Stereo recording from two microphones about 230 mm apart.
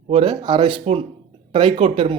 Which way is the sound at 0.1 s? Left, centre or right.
Right.